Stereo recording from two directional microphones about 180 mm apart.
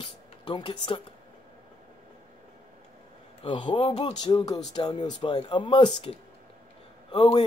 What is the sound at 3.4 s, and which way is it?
Speech, 25° left (ahead or behind).